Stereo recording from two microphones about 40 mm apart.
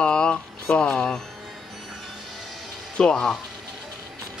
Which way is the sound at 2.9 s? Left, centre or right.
Left.